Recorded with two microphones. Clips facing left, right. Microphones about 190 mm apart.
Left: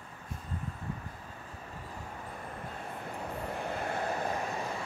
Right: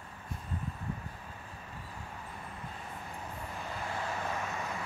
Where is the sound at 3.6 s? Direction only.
60° left (ahead or behind).